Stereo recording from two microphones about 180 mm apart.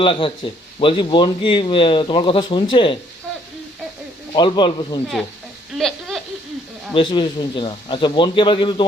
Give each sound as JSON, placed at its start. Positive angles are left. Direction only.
{"t": 0.0, "sound": "speech", "side_deg": 30}
{"t": 4.3, "sound": "speech", "side_deg": 25}
{"t": 5.7, "sound": "a sound", "side_deg": 0}
{"t": 6.9, "sound": "speech", "side_deg": 25}